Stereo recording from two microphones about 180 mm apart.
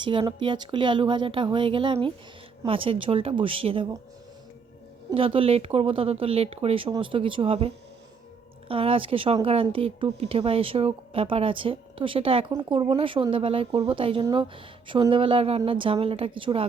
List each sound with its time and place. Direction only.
0.0 s speech: 25° right (ahead or behind)
5.1 s speech: 30° right (ahead or behind)